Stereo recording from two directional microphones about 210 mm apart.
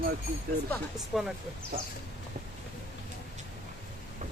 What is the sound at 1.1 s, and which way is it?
Speech, centre (ahead or behind).